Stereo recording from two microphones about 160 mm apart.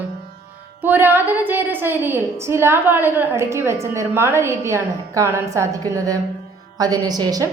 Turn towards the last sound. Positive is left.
turn(degrees=-25)  # may be behind; listen again after turning